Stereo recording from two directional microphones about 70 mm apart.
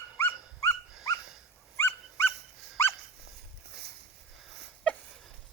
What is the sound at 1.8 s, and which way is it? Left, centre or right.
Dog, left.